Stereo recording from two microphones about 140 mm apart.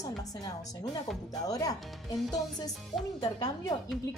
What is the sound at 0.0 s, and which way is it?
A woman's voice, 25° left (ahead or behind).